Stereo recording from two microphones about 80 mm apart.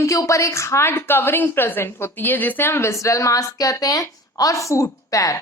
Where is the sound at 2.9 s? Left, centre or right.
Left.